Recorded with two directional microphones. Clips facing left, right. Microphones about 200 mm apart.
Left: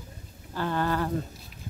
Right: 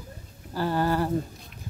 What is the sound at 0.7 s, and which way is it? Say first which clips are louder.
Speech: right 2 dB; 10° right (ahead or behind).